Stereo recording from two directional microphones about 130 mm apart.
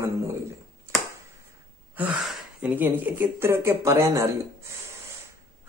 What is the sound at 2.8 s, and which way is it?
Speech, 15° right (ahead or behind).